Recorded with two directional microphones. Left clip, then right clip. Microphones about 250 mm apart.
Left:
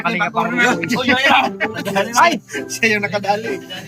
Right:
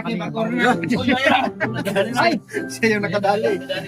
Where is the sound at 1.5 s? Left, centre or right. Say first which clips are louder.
Left 3 dB; right.